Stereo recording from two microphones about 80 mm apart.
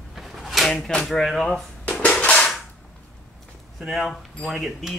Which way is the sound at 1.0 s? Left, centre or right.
Centre.